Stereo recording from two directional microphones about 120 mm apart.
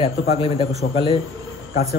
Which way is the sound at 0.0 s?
55° left (ahead or behind).